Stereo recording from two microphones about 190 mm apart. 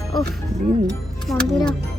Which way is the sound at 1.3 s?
Centre (ahead or behind).